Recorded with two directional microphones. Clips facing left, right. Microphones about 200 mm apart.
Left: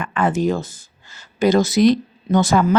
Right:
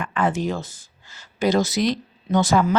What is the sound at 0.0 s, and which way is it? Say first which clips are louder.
Speech: left 4 dB; 55° left (ahead or behind).